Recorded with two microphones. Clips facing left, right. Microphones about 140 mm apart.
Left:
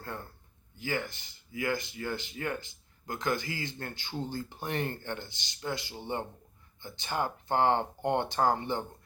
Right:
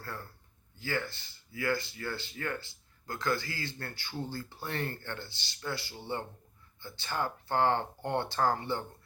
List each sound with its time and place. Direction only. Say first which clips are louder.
0.0 s a man's voice: left 2 dB; 20° left (ahead or behind)